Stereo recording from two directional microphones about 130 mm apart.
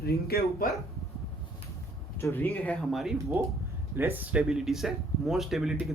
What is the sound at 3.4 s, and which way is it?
Speech, 15° right (ahead or behind).